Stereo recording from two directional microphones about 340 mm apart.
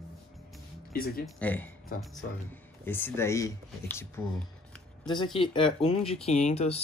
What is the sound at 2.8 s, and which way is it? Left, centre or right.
Speech, centre.